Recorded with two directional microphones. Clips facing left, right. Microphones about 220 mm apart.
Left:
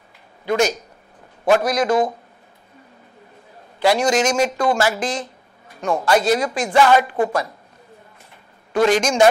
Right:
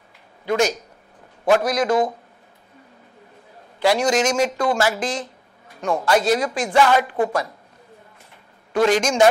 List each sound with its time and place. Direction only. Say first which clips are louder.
0.5 s speech: left 1 dB; 10° left (ahead or behind)
1.9 s speech: left 1 dB; 30° left (ahead or behind)
3.8 s speech: left 1 dB; 10° left (ahead or behind)
5.7 s a sound: left 1 dB; 10° left (ahead or behind)
6.0 s a woman's voice: left 1 dB; 10° left (ahead or behind)
8.7 s speech: left 1 dB; 10° left (ahead or behind)